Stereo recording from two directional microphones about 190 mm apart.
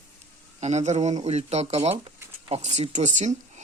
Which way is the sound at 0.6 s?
35° right (ahead or behind).